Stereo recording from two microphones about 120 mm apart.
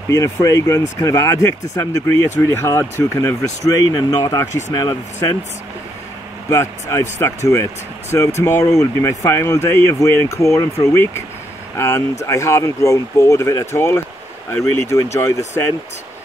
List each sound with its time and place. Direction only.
0.1 s speech: 25° left (ahead or behind)
6.5 s speech: 25° left (ahead or behind)